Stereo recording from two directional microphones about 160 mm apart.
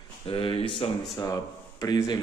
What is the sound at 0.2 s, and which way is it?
Speech, 30° left (ahead or behind).